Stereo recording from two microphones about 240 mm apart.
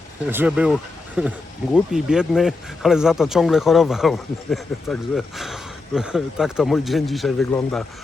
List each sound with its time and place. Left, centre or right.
0.3 s speech: centre